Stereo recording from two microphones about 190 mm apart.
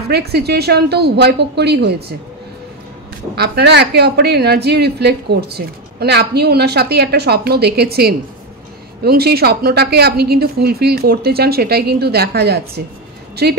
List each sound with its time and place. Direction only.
0.1 s a woman's voice: 60° right (ahead or behind)
3.3 s a woman's voice: 60° right (ahead or behind)